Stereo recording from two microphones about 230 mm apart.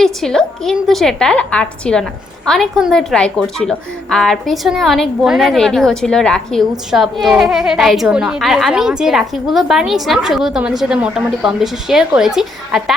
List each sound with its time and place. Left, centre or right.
0.0 s a woman's voice: centre